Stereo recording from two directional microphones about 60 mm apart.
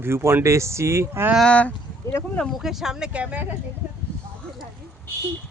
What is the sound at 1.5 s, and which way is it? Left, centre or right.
Speech, left.